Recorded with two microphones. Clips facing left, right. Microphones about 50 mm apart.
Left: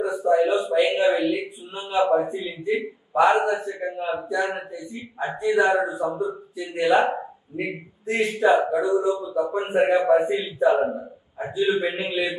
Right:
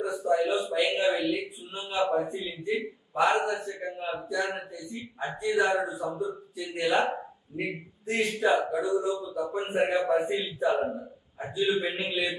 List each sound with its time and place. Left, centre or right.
0.0 s a man's voice: centre